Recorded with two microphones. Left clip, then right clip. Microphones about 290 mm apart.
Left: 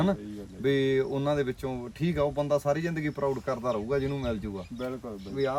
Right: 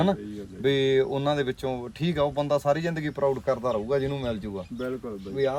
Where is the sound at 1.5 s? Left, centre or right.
Centre.